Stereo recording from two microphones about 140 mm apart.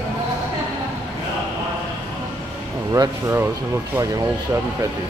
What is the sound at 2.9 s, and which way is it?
Speech, 20° right (ahead or behind).